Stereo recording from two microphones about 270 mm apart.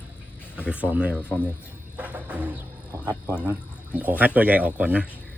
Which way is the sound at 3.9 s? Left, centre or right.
Centre.